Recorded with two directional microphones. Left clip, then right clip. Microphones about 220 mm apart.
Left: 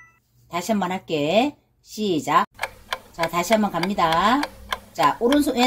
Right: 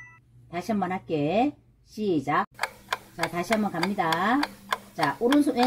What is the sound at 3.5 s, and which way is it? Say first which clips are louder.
Speech: left 6 dB; centre (ahead or behind).